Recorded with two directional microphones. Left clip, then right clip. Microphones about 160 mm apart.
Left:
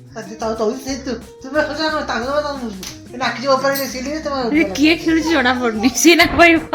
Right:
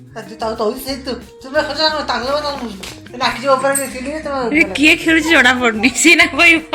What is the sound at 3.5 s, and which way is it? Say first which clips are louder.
Speech: right 1 dB; 90° left.